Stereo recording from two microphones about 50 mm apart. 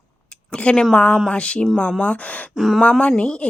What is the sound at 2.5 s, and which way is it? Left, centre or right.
Speech, centre.